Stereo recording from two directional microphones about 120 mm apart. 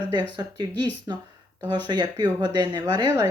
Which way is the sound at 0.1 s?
35° right (ahead or behind).